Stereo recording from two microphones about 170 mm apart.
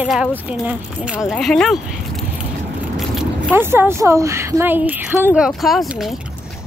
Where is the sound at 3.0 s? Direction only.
Centre (ahead or behind).